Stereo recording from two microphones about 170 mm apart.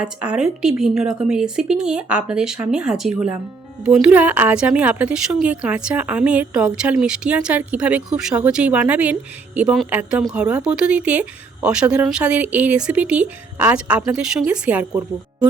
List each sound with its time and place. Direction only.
0.0 s a woman's voice: 5° right (ahead or behind)